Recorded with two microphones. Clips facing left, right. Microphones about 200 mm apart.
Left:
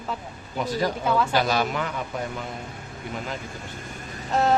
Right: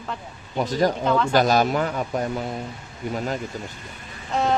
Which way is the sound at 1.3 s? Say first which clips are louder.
Right 5 dB; 45° right (ahead or behind).